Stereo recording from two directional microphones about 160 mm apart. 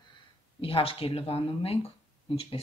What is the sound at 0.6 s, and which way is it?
Speech, 35° left (ahead or behind).